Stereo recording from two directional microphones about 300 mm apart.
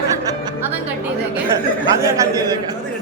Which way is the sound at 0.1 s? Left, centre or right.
Centre.